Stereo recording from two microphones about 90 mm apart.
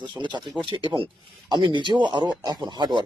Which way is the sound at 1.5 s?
55° right (ahead or behind).